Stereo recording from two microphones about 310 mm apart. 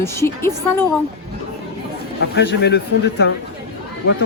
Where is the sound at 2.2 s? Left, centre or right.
Left.